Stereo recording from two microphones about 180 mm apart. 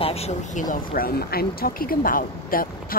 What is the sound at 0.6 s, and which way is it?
Speech, 50° left (ahead or behind).